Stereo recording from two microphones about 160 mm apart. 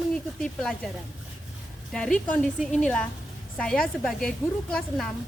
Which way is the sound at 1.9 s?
5° left (ahead or behind).